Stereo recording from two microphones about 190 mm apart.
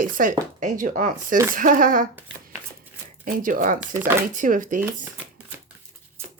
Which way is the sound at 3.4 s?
45° right (ahead or behind).